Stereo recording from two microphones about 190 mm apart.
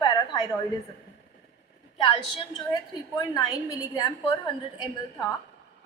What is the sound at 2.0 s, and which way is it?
A woman's voice, 25° left (ahead or behind).